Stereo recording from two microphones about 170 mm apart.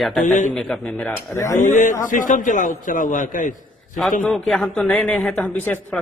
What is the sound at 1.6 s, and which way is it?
A man's voice, 50° left (ahead or behind).